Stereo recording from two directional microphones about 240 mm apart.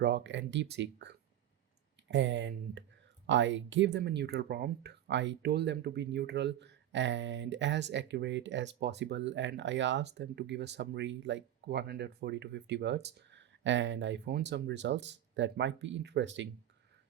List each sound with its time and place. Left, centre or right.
0.0 s speech: right